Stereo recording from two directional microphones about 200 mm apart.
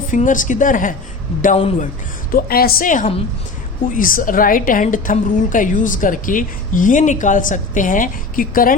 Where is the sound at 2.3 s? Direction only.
50° left (ahead or behind).